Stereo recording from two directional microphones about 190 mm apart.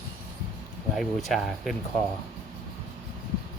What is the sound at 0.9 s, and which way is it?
Speech, centre (ahead or behind).